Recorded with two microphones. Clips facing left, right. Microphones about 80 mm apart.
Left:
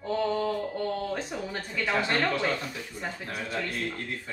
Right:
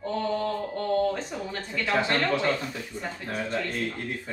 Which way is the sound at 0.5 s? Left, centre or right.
Centre.